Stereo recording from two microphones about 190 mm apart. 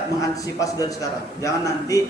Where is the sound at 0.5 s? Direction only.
15° left (ahead or behind).